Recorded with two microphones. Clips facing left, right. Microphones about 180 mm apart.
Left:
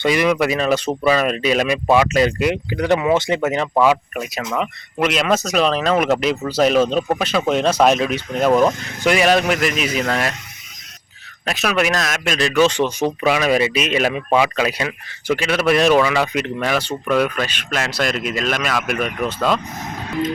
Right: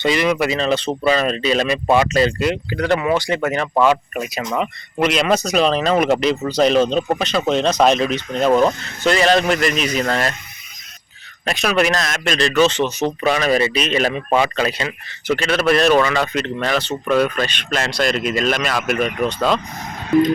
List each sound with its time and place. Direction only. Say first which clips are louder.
0.0 s speech: left 1 dB; 10° left (ahead or behind)
3.8 s speech: right 1 dB; centre (ahead or behind)
11.4 s speech: right 2 dB; 5° left (ahead or behind)